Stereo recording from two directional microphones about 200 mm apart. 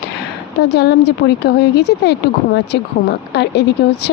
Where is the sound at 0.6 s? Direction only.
60° left (ahead or behind).